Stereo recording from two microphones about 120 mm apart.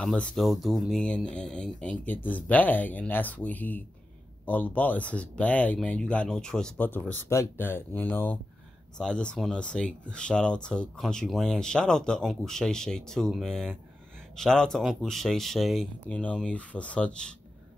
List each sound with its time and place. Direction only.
0.0 s speech: 10° left (ahead or behind)
16.1 s speech: 10° left (ahead or behind)